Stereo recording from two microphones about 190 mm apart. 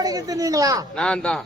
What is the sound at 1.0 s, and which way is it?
Speech, 5° left (ahead or behind).